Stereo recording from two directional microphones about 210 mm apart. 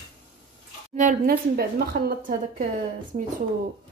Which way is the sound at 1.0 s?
40° right (ahead or behind).